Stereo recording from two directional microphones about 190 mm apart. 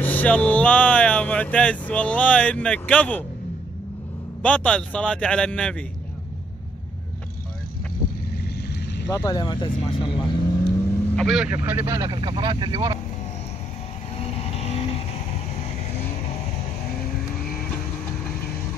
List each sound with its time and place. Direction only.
0.0 s speech: 10° left (ahead or behind)
4.4 s a man's voice: 5° left (ahead or behind)
9.1 s speech: 20° left (ahead or behind)
11.1 s a man's voice: centre (ahead or behind)
11.5 s speech: 10° right (ahead or behind)
14.1 s vehicle: 35° left (ahead or behind)
18.2 s vehicle: 5° left (ahead or behind)